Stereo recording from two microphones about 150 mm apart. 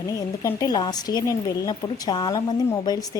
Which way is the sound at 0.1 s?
20° left (ahead or behind).